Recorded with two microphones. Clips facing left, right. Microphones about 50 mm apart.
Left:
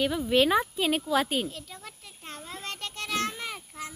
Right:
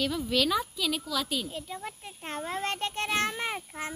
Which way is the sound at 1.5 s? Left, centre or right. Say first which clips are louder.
Right 5 dB; centre.